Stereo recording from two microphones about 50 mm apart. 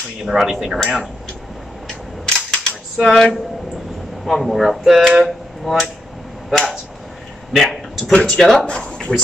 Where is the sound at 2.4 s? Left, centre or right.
Centre.